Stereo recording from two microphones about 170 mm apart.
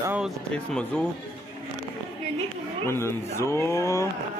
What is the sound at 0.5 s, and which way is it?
Speech, 5° left (ahead or behind).